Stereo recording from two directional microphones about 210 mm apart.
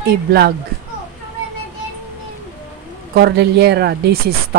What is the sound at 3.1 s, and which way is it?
Speech, 50° right (ahead or behind).